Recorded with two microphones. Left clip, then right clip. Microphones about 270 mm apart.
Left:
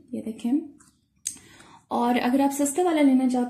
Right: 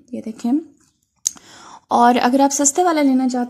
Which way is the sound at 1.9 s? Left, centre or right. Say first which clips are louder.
Right 10 dB; right.